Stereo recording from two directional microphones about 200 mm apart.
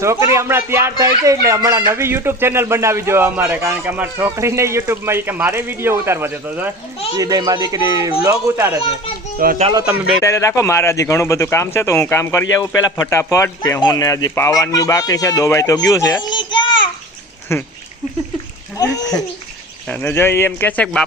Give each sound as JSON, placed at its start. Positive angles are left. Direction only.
{"t": 0.0, "sound": "a child's voice", "side_deg": -15}
{"t": 9.4, "sound": "speech", "side_deg": -45}
{"t": 10.2, "sound": "speech", "side_deg": 15}
{"t": 18.8, "sound": "speech", "side_deg": 20}